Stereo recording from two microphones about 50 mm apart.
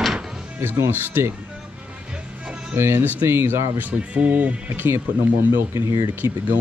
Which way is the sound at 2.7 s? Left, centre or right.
Right.